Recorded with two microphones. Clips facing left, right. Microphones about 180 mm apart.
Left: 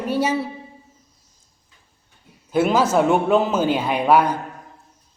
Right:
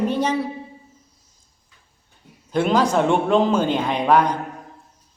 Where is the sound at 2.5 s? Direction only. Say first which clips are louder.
Left 1 dB; 5° left (ahead or behind).